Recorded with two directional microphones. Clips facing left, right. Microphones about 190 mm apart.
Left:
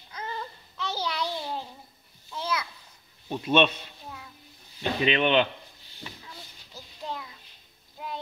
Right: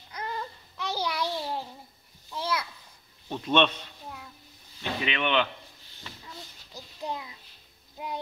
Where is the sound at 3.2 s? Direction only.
10° left (ahead or behind).